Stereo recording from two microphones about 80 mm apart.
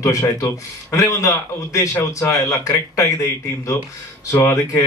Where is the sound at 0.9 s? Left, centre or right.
Left.